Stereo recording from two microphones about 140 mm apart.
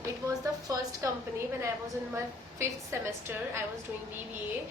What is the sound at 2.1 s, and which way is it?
A woman's voice, 20° right (ahead or behind).